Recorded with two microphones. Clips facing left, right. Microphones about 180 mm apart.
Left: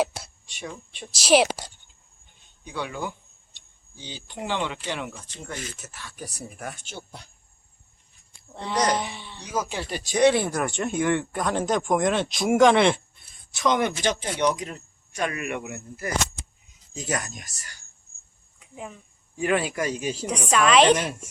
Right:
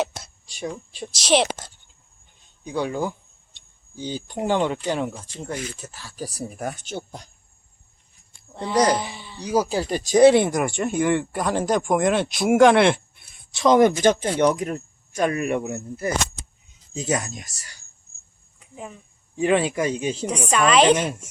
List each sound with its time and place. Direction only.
0.0 s a sound: 5° left (ahead or behind)
1.1 s a woman's voice: 5° left (ahead or behind)
2.6 s speech: 40° right (ahead or behind)
8.4 s a sound: centre (ahead or behind)
9.4 s speech: 35° right (ahead or behind)
10.5 s speech: 10° right (ahead or behind)
13.5 s speech: 30° right (ahead or behind)
18.6 s speech: centre (ahead or behind)
19.4 s speech: 25° right (ahead or behind)
20.2 s speech: centre (ahead or behind)